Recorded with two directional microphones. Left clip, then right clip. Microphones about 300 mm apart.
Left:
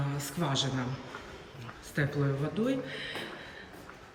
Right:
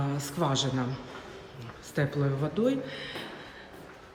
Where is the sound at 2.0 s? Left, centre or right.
Centre.